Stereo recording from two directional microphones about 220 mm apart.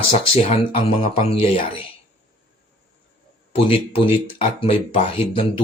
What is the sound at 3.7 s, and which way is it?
Speech, 25° left (ahead or behind).